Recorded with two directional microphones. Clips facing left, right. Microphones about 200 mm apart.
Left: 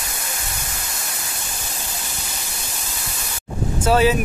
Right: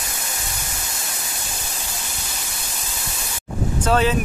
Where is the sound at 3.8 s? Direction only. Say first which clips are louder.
Left 3 dB; 10° left (ahead or behind).